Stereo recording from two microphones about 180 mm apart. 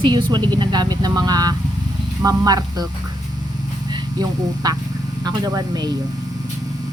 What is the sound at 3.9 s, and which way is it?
Speech, 20° right (ahead or behind).